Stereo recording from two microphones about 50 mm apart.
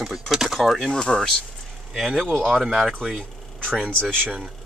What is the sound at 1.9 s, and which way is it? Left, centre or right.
Speech, centre.